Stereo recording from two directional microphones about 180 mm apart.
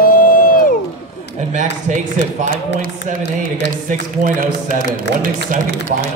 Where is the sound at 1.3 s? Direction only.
40° right (ahead or behind).